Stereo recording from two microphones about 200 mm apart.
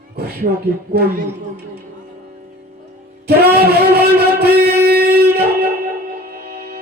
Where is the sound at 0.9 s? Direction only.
50° right (ahead or behind).